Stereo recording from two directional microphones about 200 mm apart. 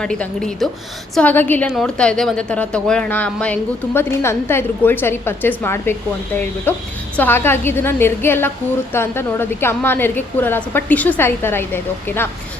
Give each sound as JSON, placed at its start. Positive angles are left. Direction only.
{"t": 0.0, "sound": "a woman's voice", "side_deg": 5}